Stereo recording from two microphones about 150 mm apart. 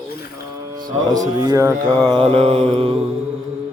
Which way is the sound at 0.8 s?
30° right (ahead or behind).